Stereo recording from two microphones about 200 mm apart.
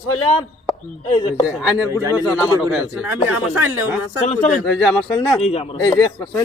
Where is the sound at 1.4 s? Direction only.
5° right (ahead or behind).